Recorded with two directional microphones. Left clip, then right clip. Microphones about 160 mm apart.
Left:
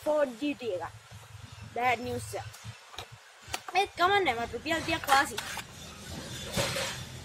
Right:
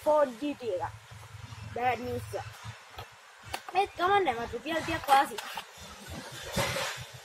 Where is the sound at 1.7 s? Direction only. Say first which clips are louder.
Left 1 dB; 15° left (ahead or behind).